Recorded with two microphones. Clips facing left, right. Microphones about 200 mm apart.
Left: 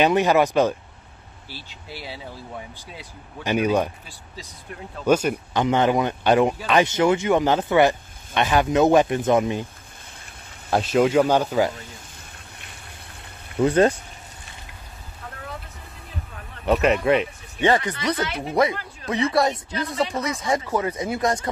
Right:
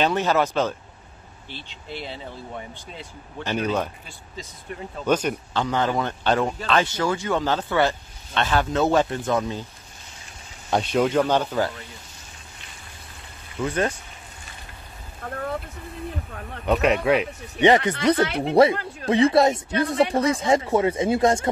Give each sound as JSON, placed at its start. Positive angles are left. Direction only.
{"t": 0.0, "sound": "speech", "side_deg": 15}
{"t": 4.4, "sound": "speech", "side_deg": 0}
{"t": 10.7, "sound": "speech", "side_deg": 5}
{"t": 13.6, "sound": "speech", "side_deg": 35}
{"t": 15.2, "sound": "vehicle", "side_deg": -50}
{"t": 16.6, "sound": "speech", "side_deg": 0}
{"t": 17.6, "sound": "speech", "side_deg": -20}
{"t": 18.2, "sound": "speech", "side_deg": -60}
{"t": 18.5, "sound": "speech", "side_deg": -30}